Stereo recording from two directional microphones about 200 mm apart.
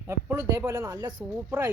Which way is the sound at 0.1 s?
15° right (ahead or behind).